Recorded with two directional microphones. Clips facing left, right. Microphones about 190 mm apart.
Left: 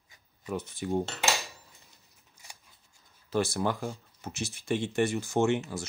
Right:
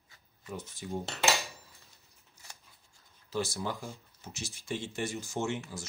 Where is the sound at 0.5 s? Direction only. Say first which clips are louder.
Left 7 dB; 65° left (ahead or behind).